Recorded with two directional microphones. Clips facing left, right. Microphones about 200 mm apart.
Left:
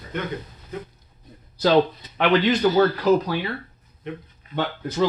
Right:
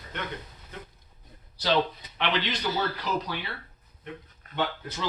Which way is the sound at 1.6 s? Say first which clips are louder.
Left 8 dB; 45° left (ahead or behind).